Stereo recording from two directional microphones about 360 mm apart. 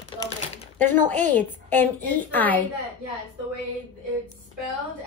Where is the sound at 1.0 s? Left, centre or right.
Right.